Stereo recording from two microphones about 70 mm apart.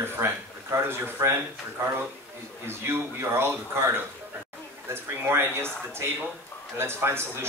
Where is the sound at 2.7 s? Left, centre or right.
Right.